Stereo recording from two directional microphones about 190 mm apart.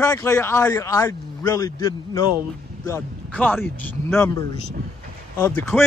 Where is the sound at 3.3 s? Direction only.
10° left (ahead or behind).